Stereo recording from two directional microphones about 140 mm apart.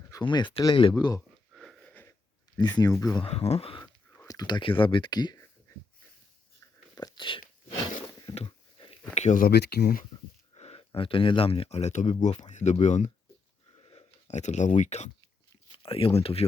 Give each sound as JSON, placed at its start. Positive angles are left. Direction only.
{"t": 0.1, "sound": "speech", "side_deg": 35}
{"t": 1.5, "sound": "wheeze", "side_deg": 0}
{"t": 1.9, "sound": "wheeze", "side_deg": 15}
{"t": 2.6, "sound": "speech", "side_deg": 30}
{"t": 3.2, "sound": "speech", "side_deg": 45}
{"t": 4.2, "sound": "speech", "side_deg": 25}
{"t": 6.9, "sound": "a sound", "side_deg": 30}
{"t": 8.4, "sound": "sniff", "side_deg": 40}
{"t": 9.1, "sound": "speech", "side_deg": 55}
{"t": 9.4, "sound": "speech", "side_deg": 90}
{"t": 10.5, "sound": "speech", "side_deg": 45}
{"t": 13.7, "sound": "a sound", "side_deg": 45}
{"t": 14.8, "sound": "speech", "side_deg": 55}
{"t": 15.7, "sound": "speech", "side_deg": 40}